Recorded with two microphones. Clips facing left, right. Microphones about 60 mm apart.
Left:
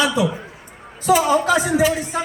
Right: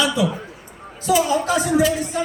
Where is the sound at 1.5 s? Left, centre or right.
Left.